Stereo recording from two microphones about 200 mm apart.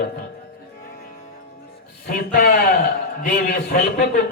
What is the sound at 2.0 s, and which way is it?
A man's voice, 50° left (ahead or behind).